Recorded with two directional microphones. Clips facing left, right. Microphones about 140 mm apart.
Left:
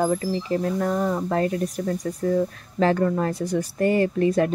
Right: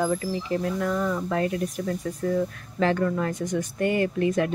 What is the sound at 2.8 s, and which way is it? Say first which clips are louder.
Speech: left 3 dB; 35° left (ahead or behind).